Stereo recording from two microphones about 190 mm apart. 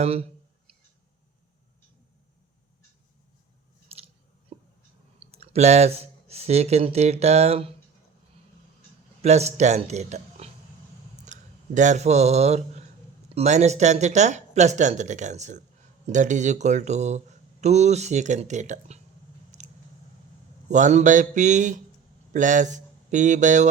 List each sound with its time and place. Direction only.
0.0 s speech: 30° right (ahead or behind)
3.9 s chewing: 30° right (ahead or behind)
4.5 s a sound: 30° right (ahead or behind)
5.2 s speech: 30° right (ahead or behind)
9.2 s speech: 35° right (ahead or behind)
19.5 s a sound: 40° right (ahead or behind)
20.7 s speech: 40° right (ahead or behind)